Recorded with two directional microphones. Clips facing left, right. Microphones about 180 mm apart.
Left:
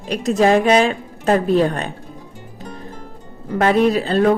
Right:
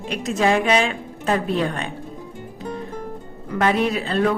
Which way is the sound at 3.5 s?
35° left (ahead or behind).